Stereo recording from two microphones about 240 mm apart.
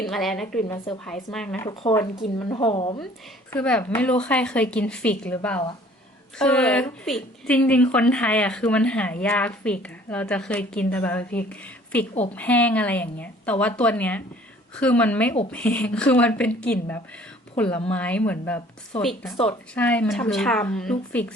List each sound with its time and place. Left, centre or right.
0.0 s a woman's voice: centre; by 3.0 s left
3.5 s a woman's voice: centre
17.9 s a woman's voice: centre